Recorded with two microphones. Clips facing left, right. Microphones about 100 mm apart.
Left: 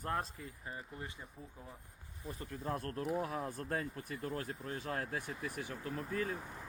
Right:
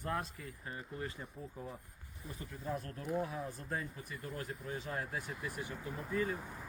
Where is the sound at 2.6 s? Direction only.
55° left (ahead or behind).